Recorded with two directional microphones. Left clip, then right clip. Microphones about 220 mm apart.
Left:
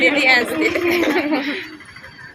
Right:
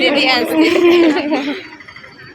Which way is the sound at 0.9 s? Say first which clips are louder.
Right 6 dB; 5° right (ahead or behind).